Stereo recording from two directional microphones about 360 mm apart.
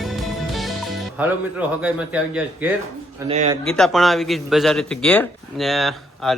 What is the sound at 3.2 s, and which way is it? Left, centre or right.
Speech, centre.